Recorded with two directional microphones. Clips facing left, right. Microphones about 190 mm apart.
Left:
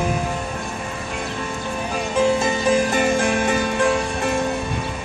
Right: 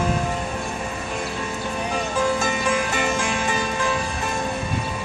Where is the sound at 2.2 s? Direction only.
25° left (ahead or behind); by 4.3 s 65° left (ahead or behind).